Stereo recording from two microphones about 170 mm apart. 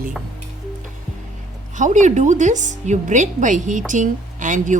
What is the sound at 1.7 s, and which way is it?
A woman's voice, 45° right (ahead or behind).